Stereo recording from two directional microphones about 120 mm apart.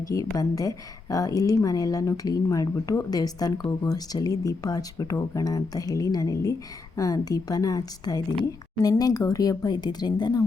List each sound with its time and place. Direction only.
0.1 s a woman's voice: 30° left (ahead or behind)